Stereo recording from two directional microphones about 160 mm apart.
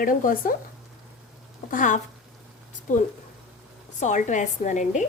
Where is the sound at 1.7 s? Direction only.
55° left (ahead or behind).